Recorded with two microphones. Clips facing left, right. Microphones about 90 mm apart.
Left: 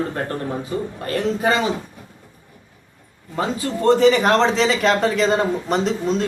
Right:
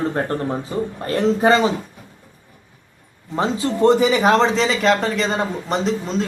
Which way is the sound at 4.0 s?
5° right (ahead or behind).